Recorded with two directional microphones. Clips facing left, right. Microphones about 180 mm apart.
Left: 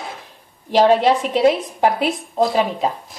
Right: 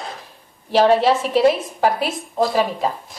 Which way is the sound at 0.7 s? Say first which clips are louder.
Left 1 dB; 15° left (ahead or behind).